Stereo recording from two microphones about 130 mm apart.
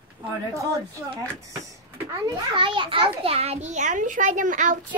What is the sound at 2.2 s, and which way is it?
A child's voice, 35° right (ahead or behind).